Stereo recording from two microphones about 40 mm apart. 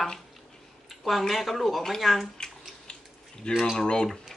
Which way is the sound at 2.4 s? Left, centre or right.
Left.